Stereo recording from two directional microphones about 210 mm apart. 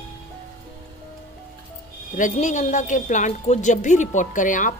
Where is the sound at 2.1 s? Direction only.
35° left (ahead or behind).